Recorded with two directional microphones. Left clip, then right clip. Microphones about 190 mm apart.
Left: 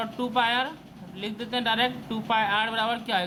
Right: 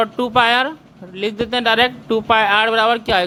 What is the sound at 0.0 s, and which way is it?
A man's voice, 45° right (ahead or behind).